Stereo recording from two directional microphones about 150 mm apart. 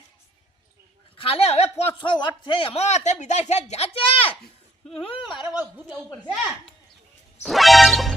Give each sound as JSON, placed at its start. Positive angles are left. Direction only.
{"t": 1.1, "sound": "a woman's voice", "side_deg": 40}
{"t": 1.8, "sound": "speech", "side_deg": 30}
{"t": 7.4, "sound": "music", "side_deg": 0}